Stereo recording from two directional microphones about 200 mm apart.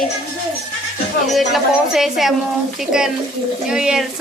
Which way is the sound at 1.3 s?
Centre (ahead or behind).